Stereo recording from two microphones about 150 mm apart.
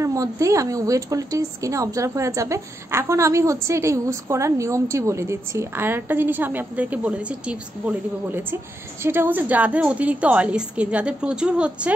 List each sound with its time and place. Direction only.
0.0 s a woman's voice: 20° right (ahead or behind)